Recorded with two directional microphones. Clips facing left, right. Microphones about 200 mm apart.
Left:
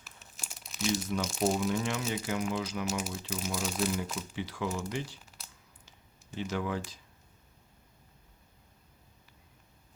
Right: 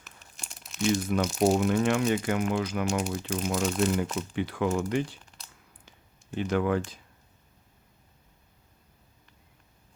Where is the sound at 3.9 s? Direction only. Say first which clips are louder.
Right 6 dB; 65° right (ahead or behind).